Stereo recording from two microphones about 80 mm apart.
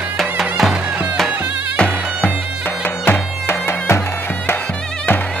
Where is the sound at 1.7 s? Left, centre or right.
Centre.